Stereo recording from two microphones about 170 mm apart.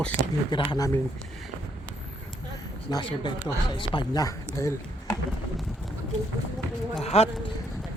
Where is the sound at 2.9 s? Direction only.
30° left (ahead or behind).